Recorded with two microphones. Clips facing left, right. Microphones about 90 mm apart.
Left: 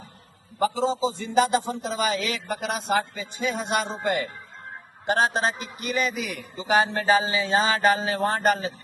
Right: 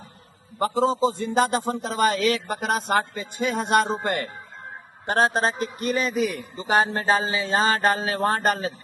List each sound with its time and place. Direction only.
0.6 s a man's voice: 55° right (ahead or behind)